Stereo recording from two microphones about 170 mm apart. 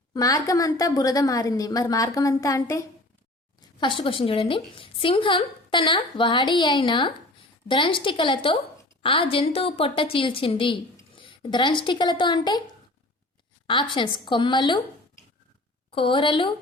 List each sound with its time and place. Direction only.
0.1 s a woman's voice: 20° left (ahead or behind)
3.8 s a woman's voice: 30° left (ahead or behind)
13.7 s a woman's voice: 30° left (ahead or behind)
15.9 s a woman's voice: 30° left (ahead or behind)